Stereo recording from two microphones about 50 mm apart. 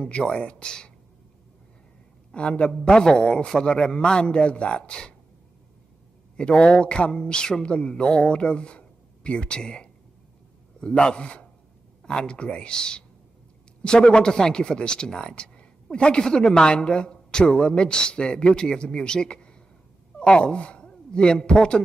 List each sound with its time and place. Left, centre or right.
0.0 s a man's voice: centre
2.3 s a man's voice: left
6.3 s a man's voice: centre